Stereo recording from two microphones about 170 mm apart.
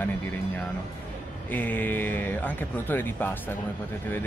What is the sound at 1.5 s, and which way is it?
Speech, 10° left (ahead or behind).